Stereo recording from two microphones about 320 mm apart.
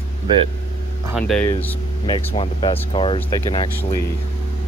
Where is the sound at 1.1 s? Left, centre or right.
Centre.